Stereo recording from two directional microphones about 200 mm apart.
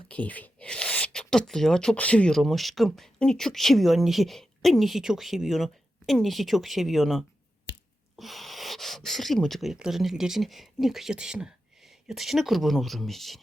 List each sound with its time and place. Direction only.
0.1 s speech: 5° left (ahead or behind)
7.7 s a sound: 55° left (ahead or behind)
8.2 s speech: centre (ahead or behind)